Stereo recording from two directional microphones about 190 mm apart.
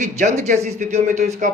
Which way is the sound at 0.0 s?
35° right (ahead or behind).